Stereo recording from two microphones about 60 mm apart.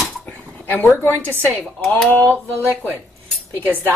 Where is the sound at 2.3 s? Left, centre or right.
Right.